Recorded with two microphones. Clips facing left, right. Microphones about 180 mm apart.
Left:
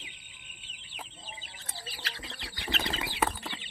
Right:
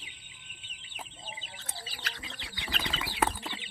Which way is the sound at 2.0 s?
30° left (ahead or behind).